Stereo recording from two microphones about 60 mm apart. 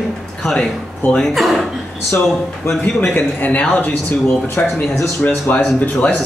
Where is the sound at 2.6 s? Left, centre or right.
Left.